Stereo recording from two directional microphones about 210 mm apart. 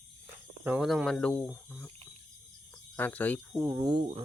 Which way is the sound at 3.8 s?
20° right (ahead or behind).